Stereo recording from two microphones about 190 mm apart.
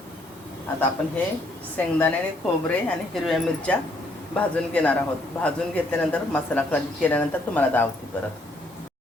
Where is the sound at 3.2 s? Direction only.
Centre (ahead or behind).